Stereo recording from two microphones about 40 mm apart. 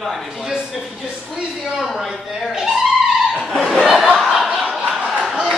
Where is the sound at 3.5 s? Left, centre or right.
Centre.